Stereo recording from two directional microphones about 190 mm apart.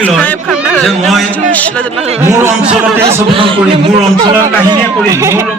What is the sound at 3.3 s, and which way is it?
Speech, 25° right (ahead or behind).